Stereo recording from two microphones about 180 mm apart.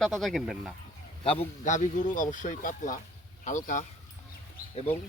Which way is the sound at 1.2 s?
30° left (ahead or behind).